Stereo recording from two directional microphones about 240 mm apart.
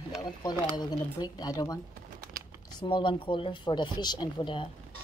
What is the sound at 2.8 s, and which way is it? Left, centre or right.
Speech, centre.